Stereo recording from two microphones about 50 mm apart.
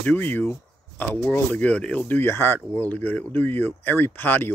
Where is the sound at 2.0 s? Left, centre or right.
Left.